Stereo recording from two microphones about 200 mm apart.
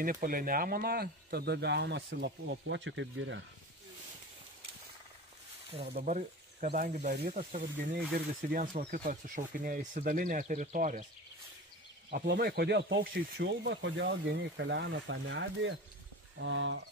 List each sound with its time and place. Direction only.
0.0 s speech: 45° right (ahead or behind); by 3.3 s 70° right (ahead or behind)
5.7 s speech: 30° right (ahead or behind)
12.1 s speech: 50° right (ahead or behind); by 16.8 s 70° right (ahead or behind)